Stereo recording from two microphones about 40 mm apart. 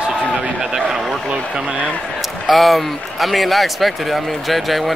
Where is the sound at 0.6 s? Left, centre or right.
Centre.